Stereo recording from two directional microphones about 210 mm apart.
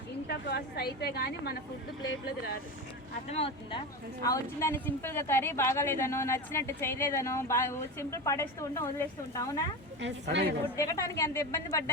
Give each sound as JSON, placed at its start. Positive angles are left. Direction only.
{"t": 0.3, "sound": "a woman's voice", "side_deg": 50}
{"t": 3.2, "sound": "speech", "side_deg": 30}
{"t": 4.2, "sound": "a woman's voice", "side_deg": 15}
{"t": 10.0, "sound": "a woman's voice", "side_deg": -55}
{"t": 10.8, "sound": "a woman's voice", "side_deg": 15}